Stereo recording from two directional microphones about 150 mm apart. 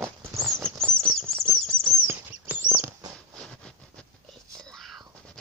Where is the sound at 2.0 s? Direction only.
15° right (ahead or behind).